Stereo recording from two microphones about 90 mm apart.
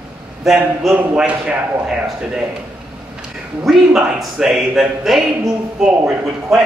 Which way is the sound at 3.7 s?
5° right (ahead or behind).